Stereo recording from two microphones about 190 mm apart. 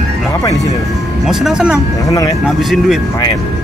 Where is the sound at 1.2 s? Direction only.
5° right (ahead or behind).